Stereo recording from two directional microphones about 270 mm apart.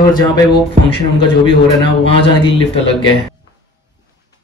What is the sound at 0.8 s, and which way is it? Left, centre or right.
Speech, centre.